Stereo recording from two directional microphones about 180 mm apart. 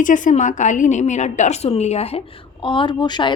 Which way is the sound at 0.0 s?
45° left (ahead or behind).